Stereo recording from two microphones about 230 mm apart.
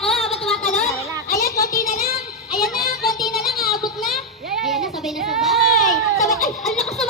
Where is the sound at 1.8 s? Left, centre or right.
Left.